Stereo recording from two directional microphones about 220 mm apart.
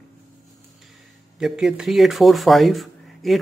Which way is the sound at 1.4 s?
5° right (ahead or behind).